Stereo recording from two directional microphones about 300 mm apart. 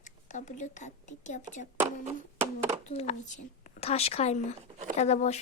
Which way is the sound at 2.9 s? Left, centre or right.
Left.